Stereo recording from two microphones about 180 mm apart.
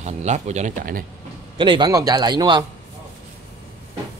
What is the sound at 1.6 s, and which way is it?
A man's voice, 25° right (ahead or behind).